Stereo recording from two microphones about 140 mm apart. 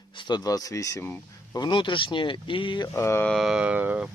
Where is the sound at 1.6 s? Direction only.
35° left (ahead or behind).